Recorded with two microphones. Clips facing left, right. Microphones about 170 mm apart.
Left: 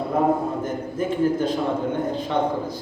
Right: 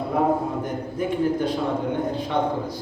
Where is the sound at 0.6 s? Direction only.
15° right (ahead or behind).